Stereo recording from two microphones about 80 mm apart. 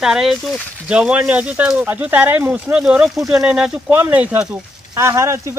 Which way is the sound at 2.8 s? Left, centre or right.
Centre.